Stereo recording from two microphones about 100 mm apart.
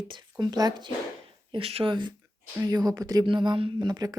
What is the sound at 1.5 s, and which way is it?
Speech, 75° right (ahead or behind).